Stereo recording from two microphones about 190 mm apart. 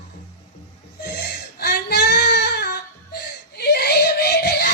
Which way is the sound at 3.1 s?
55° left (ahead or behind).